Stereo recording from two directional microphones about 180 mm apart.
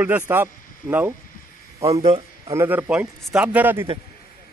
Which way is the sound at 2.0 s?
35° right (ahead or behind).